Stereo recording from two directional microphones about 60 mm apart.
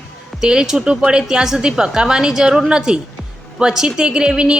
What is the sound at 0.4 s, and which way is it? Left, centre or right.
A woman's voice, centre.